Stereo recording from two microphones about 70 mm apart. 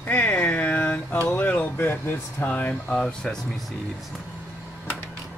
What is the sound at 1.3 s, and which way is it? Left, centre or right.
Speech, left.